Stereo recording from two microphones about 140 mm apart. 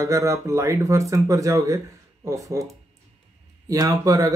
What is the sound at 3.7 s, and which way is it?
Speech, 25° right (ahead or behind).